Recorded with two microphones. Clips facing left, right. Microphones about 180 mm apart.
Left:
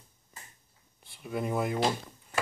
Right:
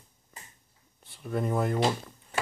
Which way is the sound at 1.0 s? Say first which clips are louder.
Right 2 dB; 5° left (ahead or behind).